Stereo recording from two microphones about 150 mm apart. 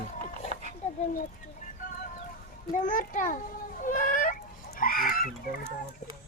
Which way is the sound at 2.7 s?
60° left (ahead or behind).